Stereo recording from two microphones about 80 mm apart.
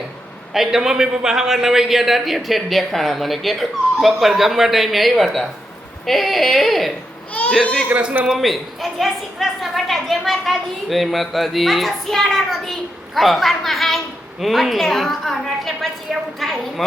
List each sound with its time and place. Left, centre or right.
0.5 s a woman's voice: centre
7.9 s a man's voice: centre
8.3 s a woman's voice: centre